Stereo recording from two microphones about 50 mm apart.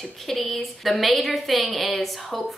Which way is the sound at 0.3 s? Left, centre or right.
Centre.